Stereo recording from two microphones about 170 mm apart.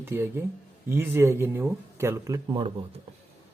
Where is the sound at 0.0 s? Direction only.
15° right (ahead or behind).